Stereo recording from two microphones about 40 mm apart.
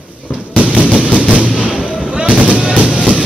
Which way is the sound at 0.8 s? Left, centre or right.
Right.